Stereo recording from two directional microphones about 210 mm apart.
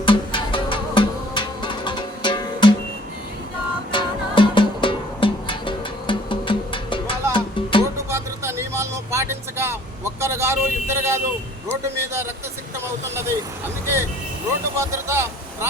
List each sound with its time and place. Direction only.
0.0 s music: 25° left (ahead or behind)
3.9 s music: 25° left (ahead or behind)
8.1 s vehicle: 10° right (ahead or behind)
13.8 s speech: 10° right (ahead or behind)